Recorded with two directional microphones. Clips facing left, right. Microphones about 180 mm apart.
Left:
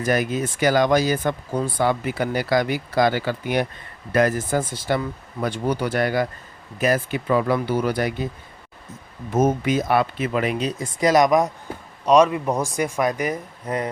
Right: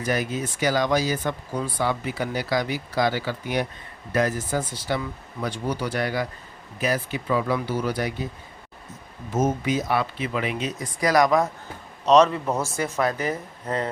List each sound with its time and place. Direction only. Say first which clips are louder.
0.0 s speech: left 4 dB; 50° left (ahead or behind)
9.3 s speech: left 4 dB; 60° left (ahead or behind)
10.6 s speech: left 4 dB; 30° left (ahead or behind); by 13.9 s 15° left (ahead or behind)